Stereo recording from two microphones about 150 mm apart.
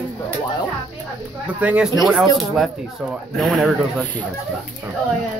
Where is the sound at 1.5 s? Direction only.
10° right (ahead or behind).